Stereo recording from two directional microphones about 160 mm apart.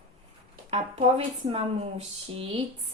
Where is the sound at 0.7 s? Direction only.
40° right (ahead or behind).